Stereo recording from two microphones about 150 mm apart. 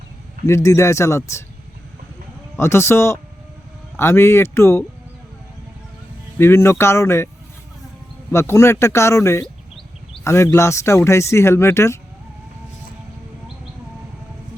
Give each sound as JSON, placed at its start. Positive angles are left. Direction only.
{"t": 0.4, "sound": "speech", "side_deg": 20}
{"t": 2.6, "sound": "speech", "side_deg": 15}
{"t": 6.4, "sound": "speech", "side_deg": 15}
{"t": 8.3, "sound": "speech", "side_deg": 15}